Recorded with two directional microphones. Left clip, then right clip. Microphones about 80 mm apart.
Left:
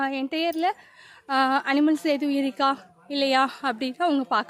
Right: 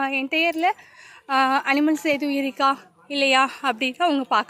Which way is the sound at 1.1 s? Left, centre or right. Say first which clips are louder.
Right 2 dB; left.